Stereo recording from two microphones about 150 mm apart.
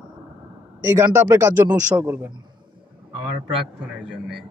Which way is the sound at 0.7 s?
15° right (ahead or behind).